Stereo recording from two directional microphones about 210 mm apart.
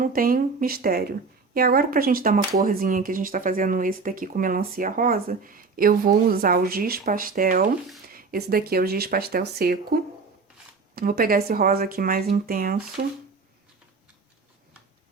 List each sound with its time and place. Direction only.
0.0 s speech: 45° right (ahead or behind)